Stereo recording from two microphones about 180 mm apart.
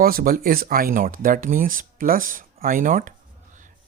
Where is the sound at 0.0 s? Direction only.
55° right (ahead or behind).